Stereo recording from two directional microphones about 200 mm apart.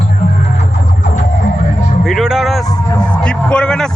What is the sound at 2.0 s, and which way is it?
Music, centre (ahead or behind).